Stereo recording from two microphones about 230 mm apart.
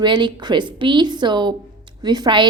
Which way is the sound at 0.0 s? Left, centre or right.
Centre.